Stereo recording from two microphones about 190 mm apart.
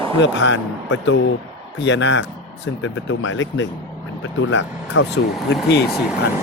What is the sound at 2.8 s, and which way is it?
Speech, 85° left.